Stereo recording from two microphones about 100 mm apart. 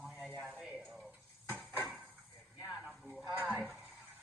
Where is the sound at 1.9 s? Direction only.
15° right (ahead or behind).